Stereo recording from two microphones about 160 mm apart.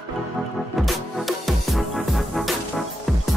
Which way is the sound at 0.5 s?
Centre (ahead or behind).